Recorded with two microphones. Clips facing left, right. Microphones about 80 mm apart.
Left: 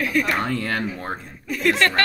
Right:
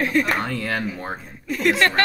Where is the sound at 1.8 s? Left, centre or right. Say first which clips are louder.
Right 1 dB; right.